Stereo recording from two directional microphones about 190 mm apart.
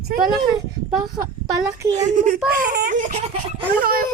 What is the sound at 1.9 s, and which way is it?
A child's voice, 45° right (ahead or behind).